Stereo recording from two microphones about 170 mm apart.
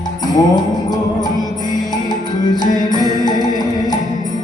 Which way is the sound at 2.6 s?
25° left (ahead or behind).